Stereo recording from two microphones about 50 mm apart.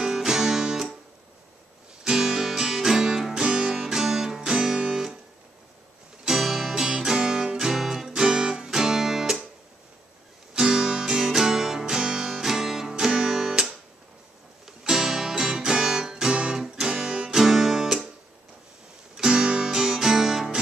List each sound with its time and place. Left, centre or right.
0.0 s music: centre
2.0 s music: centre
4.7 s music: right
6.2 s music: centre
10.5 s music: centre
14.8 s music: centre
19.1 s music: centre